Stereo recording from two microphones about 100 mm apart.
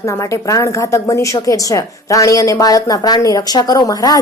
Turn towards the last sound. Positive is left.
turn(degrees=40)  # may be behind; listen again after turning